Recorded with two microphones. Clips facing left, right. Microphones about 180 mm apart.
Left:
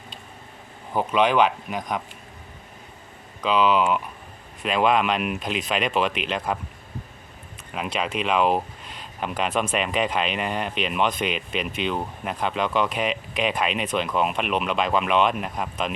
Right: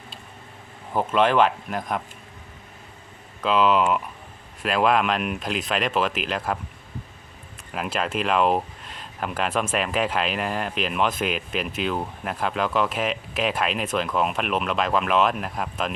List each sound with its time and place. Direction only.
0.9 s speech: centre (ahead or behind)
3.4 s speech: centre (ahead or behind)
7.7 s speech: centre (ahead or behind)